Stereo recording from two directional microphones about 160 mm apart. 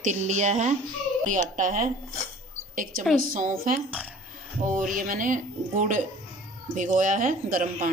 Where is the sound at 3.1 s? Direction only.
60° right (ahead or behind).